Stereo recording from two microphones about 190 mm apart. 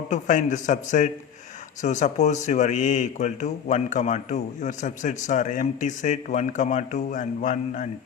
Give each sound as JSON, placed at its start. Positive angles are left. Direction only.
{"t": 0.1, "sound": "speech", "side_deg": 40}